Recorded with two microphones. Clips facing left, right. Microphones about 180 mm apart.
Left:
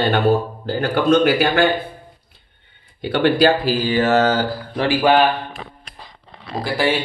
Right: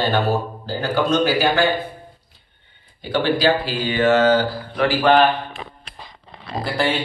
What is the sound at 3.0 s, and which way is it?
Speech, 60° left (ahead or behind).